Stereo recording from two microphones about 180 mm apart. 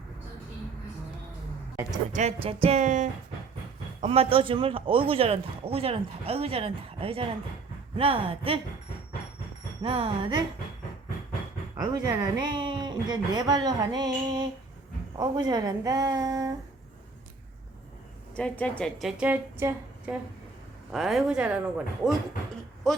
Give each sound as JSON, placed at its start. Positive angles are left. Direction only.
{"t": 1.7, "sound": "a woman's voice", "side_deg": -15}
{"t": 2.1, "sound": "speech", "side_deg": -35}
{"t": 9.8, "sound": "speech", "side_deg": -30}
{"t": 11.8, "sound": "speech", "side_deg": -20}
{"t": 18.3, "sound": "a woman's voice", "side_deg": 5}
{"t": 20.9, "sound": "a woman's voice", "side_deg": 0}